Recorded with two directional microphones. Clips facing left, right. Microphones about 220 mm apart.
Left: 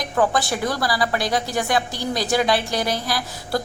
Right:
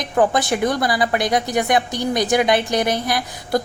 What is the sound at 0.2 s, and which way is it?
A woman's voice, 20° right (ahead or behind).